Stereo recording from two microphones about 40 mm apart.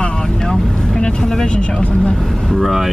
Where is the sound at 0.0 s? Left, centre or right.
Centre.